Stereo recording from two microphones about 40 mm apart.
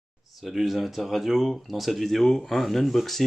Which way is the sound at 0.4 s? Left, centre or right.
Centre.